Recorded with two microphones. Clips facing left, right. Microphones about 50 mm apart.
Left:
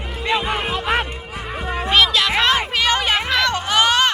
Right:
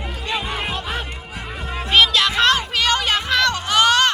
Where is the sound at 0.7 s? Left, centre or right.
Left.